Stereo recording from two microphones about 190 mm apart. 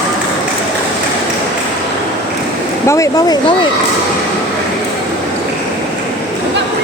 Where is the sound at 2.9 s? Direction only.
20° left (ahead or behind).